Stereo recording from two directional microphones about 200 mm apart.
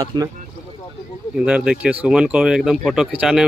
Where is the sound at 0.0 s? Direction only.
20° right (ahead or behind).